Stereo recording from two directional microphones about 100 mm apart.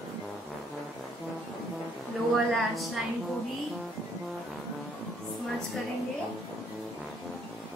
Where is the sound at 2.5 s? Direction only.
Centre (ahead or behind).